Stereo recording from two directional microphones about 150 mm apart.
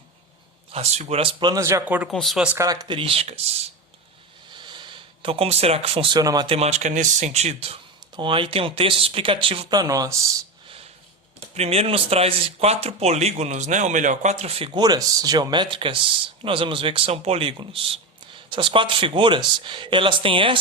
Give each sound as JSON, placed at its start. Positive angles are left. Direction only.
{"t": 0.7, "sound": "speech", "side_deg": -45}
{"t": 2.0, "sound": "speech", "side_deg": 0}
{"t": 2.6, "sound": "speech", "side_deg": -25}
{"t": 4.5, "sound": "speech", "side_deg": -30}
{"t": 6.6, "sound": "speech", "side_deg": -50}
{"t": 11.5, "sound": "speech", "side_deg": -45}